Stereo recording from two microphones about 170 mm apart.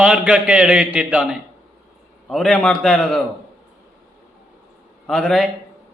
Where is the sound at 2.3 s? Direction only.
5° left (ahead or behind).